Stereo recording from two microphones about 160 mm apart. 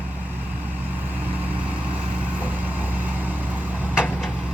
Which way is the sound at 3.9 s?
5° right (ahead or behind).